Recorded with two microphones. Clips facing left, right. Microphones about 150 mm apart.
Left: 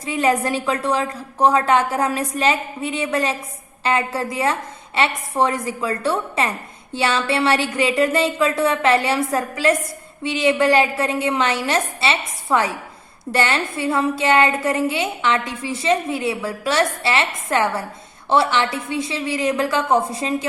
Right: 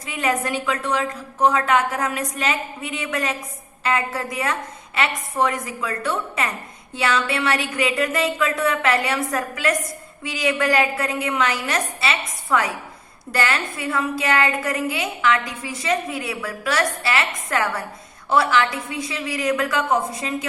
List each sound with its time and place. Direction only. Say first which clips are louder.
0.0 s a woman's voice: left 4 dB; 30° left (ahead or behind)